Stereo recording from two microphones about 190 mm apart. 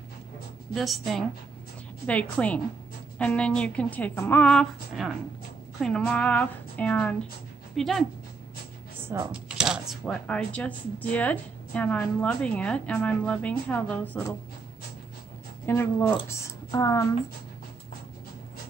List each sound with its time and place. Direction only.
0.7 s a woman's voice: centre (ahead or behind)
9.0 s speech: 10° right (ahead or behind); by 14.2 s 10° left (ahead or behind)
15.6 s a woman's voice: 10° left (ahead or behind)